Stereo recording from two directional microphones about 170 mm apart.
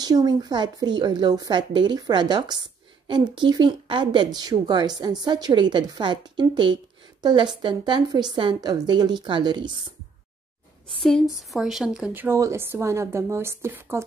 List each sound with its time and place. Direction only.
0.0 s a woman's voice: 25° right (ahead or behind)
11.0 s a woman's voice: centre (ahead or behind); by 14.0 s 15° right (ahead or behind)